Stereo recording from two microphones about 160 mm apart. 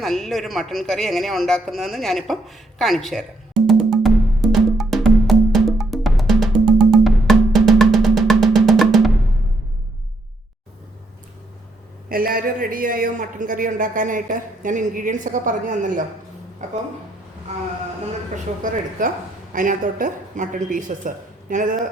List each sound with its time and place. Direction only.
0.0 s speech: centre (ahead or behind)
3.7 s music: centre (ahead or behind)
12.0 s a man's voice: 65° right (ahead or behind); by 16.8 s 50° right (ahead or behind)
18.6 s a man's voice: 60° right (ahead or behind)